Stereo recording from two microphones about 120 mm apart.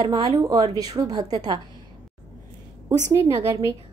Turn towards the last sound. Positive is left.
turn(degrees=-30)  # may be behind; listen again after turning